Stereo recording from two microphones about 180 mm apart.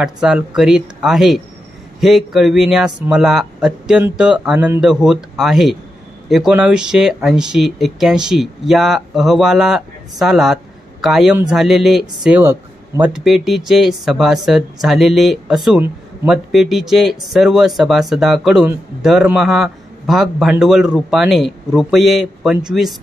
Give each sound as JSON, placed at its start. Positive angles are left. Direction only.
{"t": 0.0, "sound": "speech", "side_deg": -5}